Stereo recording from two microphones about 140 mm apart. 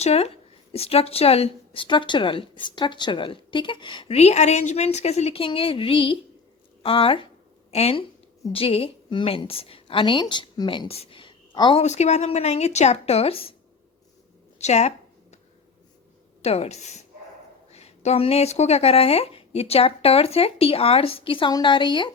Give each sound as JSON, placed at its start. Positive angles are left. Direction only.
{"t": 0.0, "sound": "a woman's voice", "side_deg": 50}
{"t": 11.8, "sound": "speech", "side_deg": 50}
{"t": 14.6, "sound": "a sound", "side_deg": 50}
{"t": 16.4, "sound": "speech", "side_deg": 50}